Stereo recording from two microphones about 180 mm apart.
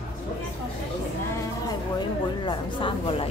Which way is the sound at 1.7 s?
25° left (ahead or behind).